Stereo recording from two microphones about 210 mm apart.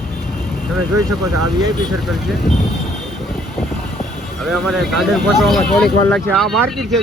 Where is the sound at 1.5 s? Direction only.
20° right (ahead or behind).